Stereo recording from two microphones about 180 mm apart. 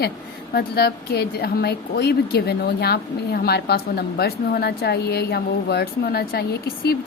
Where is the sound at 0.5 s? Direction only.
60° left (ahead or behind).